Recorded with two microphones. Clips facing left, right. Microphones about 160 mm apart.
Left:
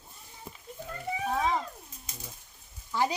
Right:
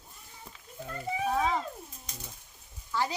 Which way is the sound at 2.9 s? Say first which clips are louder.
Left 3 dB; 20° left (ahead or behind).